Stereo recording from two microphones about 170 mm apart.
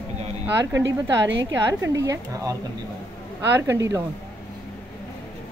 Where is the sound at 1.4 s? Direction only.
20° right (ahead or behind).